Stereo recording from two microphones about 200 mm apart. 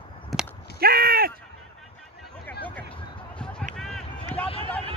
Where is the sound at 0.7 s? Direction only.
50° right (ahead or behind).